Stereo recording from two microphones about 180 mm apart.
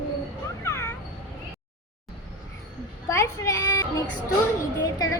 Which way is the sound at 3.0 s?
15° left (ahead or behind).